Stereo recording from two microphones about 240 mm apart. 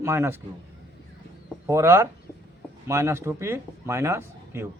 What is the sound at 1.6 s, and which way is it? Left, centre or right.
A man's voice, centre.